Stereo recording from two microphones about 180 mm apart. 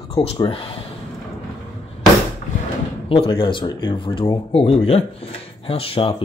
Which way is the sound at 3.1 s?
30° left (ahead or behind).